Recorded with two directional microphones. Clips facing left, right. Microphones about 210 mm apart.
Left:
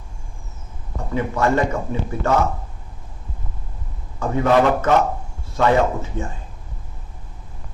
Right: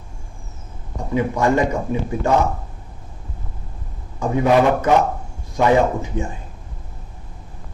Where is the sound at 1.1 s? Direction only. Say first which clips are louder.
Right 2 dB; 15° right (ahead or behind).